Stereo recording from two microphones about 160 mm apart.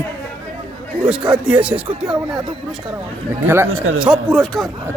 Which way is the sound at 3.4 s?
15° right (ahead or behind).